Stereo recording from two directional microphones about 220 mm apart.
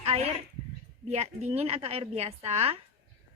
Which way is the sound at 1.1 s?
30° right (ahead or behind).